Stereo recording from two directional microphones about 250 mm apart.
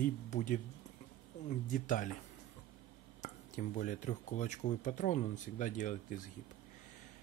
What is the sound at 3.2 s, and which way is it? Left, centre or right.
Speech, left.